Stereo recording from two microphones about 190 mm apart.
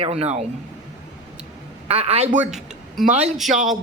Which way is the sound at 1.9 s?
30° right (ahead or behind).